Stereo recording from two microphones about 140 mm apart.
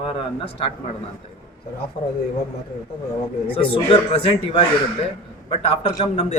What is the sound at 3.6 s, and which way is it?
Speech, 40° left (ahead or behind).